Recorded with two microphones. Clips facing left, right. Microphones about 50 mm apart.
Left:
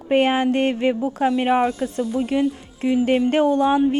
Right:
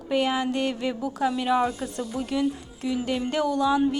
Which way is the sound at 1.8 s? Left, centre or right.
Left.